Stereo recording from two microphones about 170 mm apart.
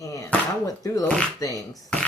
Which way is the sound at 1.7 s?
5° left (ahead or behind).